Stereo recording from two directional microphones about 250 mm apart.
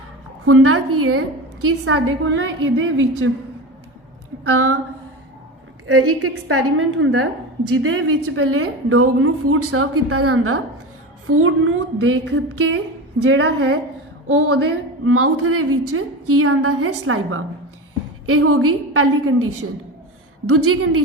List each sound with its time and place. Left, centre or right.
0.4 s a woman's voice: right
4.4 s a woman's voice: right
5.8 s a woman's voice: right